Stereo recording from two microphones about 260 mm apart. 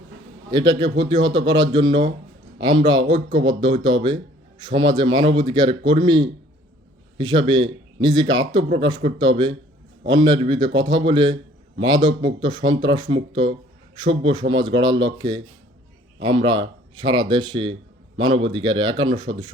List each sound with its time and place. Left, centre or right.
0.5 s speech: centre
7.5 s a man's voice: right
8.0 s a man's voice: centre